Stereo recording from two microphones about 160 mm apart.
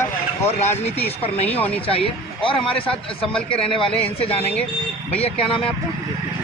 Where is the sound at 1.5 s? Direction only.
10° left (ahead or behind).